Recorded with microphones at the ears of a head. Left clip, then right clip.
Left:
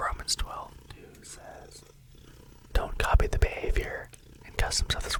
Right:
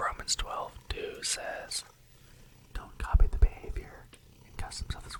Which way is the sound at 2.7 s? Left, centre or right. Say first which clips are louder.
Left 11 dB; left.